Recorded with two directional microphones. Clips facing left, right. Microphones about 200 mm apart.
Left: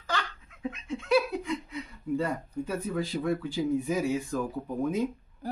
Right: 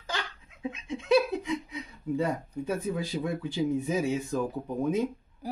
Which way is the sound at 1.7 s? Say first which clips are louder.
Left 1 dB; 20° right (ahead or behind).